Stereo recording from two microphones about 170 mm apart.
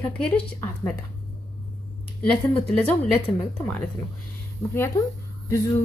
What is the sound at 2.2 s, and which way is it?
Speech, 5° left (ahead or behind).